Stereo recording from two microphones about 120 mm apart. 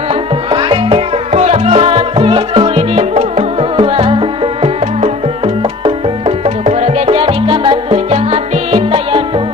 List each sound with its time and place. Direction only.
0.1 s music: 45° right (ahead or behind)
1.3 s music: 70° right (ahead or behind)